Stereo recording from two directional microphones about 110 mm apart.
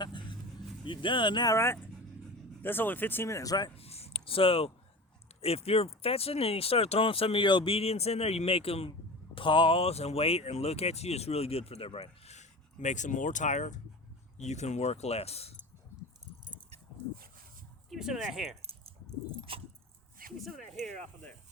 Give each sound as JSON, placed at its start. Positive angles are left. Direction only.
{"t": 0.0, "sound": "vehicle", "side_deg": 45}
{"t": 0.9, "sound": "speech", "side_deg": 50}
{"t": 1.5, "sound": "speech", "side_deg": 25}
{"t": 3.8, "sound": "a sound", "side_deg": 70}
{"t": 5.4, "sound": "speech", "side_deg": 65}
{"t": 9.3, "sound": "speech", "side_deg": 50}
{"t": 17.8, "sound": "speech", "side_deg": 0}
{"t": 18.6, "sound": "keys jangling", "side_deg": -65}